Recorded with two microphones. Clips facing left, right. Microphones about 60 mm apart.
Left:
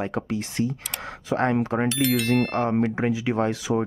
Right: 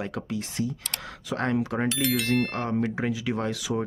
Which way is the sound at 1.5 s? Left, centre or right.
Left.